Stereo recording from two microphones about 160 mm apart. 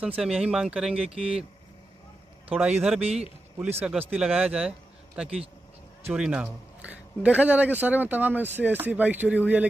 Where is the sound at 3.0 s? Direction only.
40° right (ahead or behind).